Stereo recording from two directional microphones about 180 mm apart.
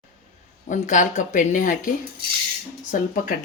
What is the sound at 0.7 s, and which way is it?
Speech, 45° left (ahead or behind).